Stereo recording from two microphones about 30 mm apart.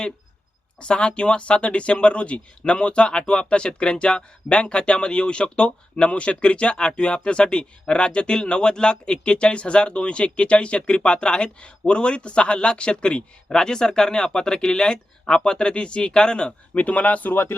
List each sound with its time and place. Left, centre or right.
0.8 s speech: left
16.7 s speech: left